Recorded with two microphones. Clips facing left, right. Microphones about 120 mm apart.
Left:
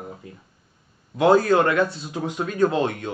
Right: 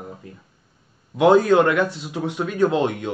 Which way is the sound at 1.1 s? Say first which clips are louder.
Right 2 dB; 15° right (ahead or behind).